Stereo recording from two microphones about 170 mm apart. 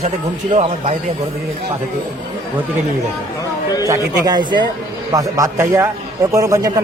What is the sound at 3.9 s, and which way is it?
A man's voice, 25° right (ahead or behind).